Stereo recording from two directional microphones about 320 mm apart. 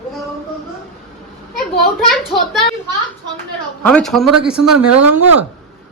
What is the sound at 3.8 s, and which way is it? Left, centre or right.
A man's voice, centre.